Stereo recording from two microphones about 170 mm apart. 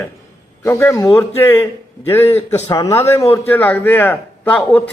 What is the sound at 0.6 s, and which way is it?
A man's voice, 15° left (ahead or behind).